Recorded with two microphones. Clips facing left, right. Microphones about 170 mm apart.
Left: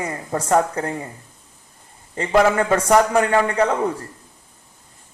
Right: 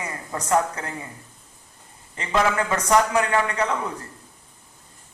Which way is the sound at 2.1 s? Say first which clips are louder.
Left 6 dB; 35° left (ahead or behind).